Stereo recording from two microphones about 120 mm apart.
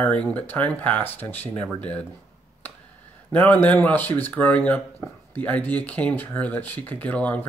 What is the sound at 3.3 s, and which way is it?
Speech, 15° left (ahead or behind).